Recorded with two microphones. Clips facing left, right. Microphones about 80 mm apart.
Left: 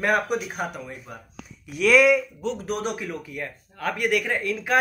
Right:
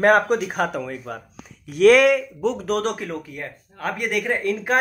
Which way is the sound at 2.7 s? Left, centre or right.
Right.